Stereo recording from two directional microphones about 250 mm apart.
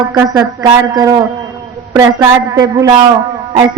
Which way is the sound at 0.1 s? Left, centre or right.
Centre.